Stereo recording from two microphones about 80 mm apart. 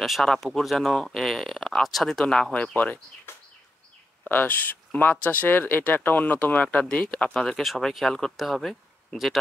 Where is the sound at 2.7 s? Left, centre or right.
Centre.